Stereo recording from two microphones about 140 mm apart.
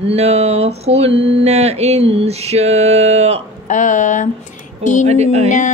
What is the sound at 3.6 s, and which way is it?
Speech, 65° left (ahead or behind).